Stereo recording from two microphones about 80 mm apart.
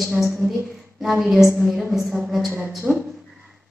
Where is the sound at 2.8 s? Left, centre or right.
Centre.